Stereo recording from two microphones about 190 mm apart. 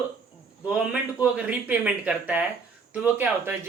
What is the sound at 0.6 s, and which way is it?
A man's voice, 5° right (ahead or behind).